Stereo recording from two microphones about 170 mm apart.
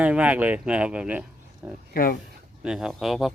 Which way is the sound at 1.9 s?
60° left (ahead or behind).